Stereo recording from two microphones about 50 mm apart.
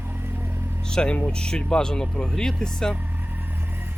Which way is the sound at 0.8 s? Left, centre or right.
Centre.